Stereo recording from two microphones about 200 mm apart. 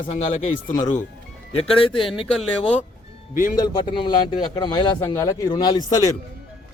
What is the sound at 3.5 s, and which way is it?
A man's voice, 20° left (ahead or behind).